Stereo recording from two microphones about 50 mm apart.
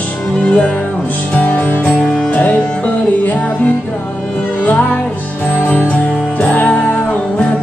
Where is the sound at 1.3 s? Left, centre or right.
Left.